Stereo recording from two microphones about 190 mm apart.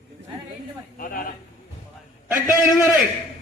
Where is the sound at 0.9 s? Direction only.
50° left (ahead or behind).